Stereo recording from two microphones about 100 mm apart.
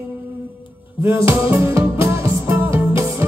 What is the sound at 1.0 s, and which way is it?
Music, 25° right (ahead or behind).